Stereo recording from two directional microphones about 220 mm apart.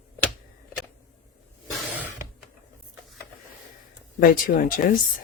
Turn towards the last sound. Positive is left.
turn(degrees=40)  # may be behind; listen again after turning